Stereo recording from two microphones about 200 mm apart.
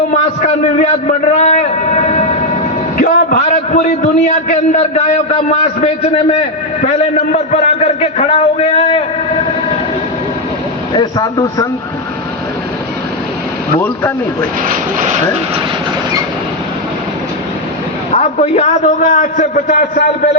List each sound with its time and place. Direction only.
0.1 s a sound: 35° left (ahead or behind)
3.0 s a man's voice: 45° left (ahead or behind)
10.9 s speech: 20° left (ahead or behind)
13.7 s speech: 10° left (ahead or behind)
14.7 s speech: 40° right (ahead or behind)
18.1 s a man's voice: 35° left (ahead or behind)